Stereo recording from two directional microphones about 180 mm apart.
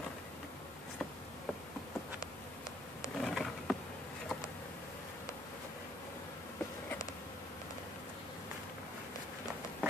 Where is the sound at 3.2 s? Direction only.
Centre (ahead or behind).